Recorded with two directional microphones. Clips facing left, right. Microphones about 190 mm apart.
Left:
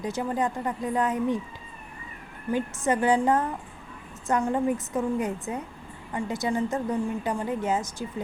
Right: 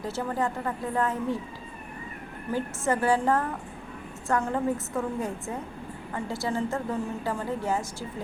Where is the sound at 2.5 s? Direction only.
20° left (ahead or behind).